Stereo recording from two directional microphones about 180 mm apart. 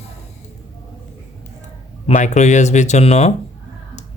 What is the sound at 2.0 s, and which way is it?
Speech, 40° left (ahead or behind).